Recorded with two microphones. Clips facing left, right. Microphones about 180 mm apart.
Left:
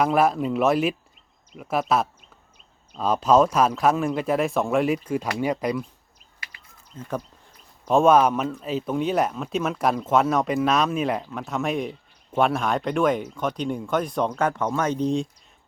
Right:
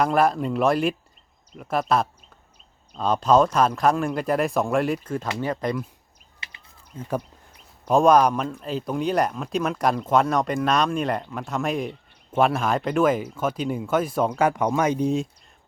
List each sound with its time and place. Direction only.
0.0 s a man's voice: 5° left (ahead or behind)
6.4 s a sound: 25° right (ahead or behind)
6.9 s speech: 15° right (ahead or behind)
7.9 s a man's voice: centre (ahead or behind)